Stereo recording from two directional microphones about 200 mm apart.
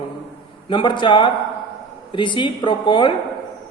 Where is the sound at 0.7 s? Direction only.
25° left (ahead or behind).